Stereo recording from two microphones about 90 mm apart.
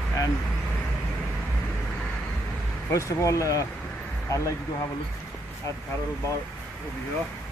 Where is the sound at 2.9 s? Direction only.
35° left (ahead or behind).